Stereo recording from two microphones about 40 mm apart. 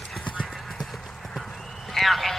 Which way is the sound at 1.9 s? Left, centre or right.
Centre.